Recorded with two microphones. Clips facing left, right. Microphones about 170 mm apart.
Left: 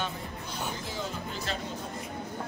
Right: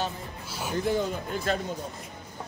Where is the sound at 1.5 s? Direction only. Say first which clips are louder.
Right 9 dB; 50° right (ahead or behind).